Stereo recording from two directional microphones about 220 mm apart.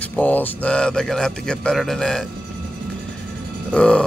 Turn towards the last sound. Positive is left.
turn(degrees=5)  # may be behind; listen again after turning